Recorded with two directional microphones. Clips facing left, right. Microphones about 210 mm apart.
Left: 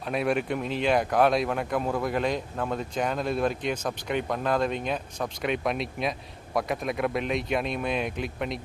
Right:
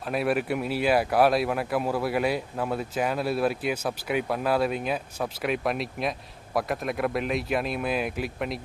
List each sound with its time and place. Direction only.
0.1 s speech: 5° right (ahead or behind)